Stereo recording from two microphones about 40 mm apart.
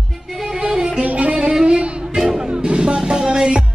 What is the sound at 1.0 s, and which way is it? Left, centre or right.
Music, right.